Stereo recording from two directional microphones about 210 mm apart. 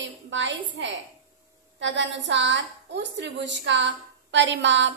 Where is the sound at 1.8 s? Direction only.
60° right (ahead or behind).